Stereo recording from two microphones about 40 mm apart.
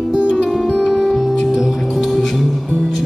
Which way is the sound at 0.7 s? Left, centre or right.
Centre.